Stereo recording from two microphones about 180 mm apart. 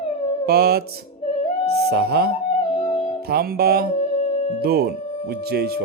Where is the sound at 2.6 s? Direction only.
40° left (ahead or behind).